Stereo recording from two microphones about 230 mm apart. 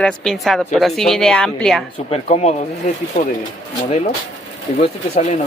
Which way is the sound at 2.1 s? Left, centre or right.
Left.